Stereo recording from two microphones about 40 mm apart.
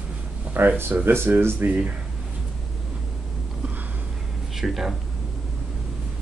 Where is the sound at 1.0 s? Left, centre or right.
Right.